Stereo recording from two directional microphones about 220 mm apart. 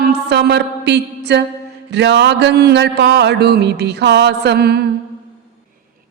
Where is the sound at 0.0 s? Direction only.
50° right (ahead or behind).